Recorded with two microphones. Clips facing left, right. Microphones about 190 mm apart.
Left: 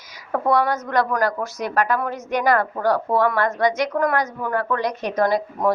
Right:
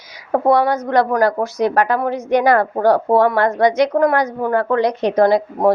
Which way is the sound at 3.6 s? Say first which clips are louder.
Right 7 dB; 65° right (ahead or behind).